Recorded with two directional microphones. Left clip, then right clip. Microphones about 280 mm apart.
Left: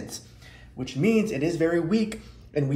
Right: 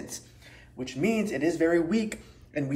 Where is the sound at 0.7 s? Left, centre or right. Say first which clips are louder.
Left 4 dB; centre.